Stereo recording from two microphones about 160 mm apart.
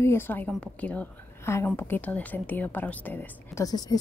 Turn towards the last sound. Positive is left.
turn(degrees=25)  # may be behind; listen again after turning